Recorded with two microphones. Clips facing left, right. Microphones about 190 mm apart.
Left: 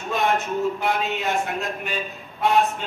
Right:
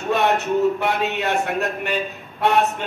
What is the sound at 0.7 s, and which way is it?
Speech, 70° right (ahead or behind).